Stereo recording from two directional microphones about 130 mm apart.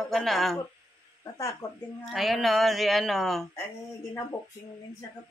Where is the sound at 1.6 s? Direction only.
25° left (ahead or behind).